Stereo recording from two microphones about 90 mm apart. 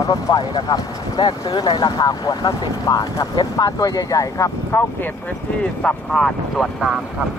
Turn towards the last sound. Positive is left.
turn(degrees=5)  # may be behind; listen again after turning